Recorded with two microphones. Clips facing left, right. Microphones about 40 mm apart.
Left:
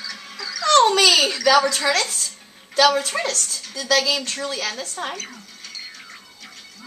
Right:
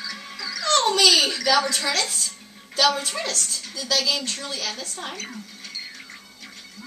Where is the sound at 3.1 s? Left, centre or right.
Left.